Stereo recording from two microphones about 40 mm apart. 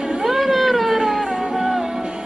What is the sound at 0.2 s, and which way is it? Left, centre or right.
Music, centre.